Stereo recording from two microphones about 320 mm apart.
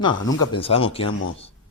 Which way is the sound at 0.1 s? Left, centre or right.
Left.